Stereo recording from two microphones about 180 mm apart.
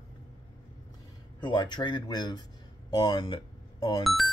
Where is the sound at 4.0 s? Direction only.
Centre (ahead or behind).